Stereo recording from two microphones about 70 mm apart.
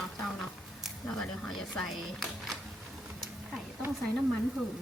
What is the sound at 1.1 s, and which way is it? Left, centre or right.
Speech, centre.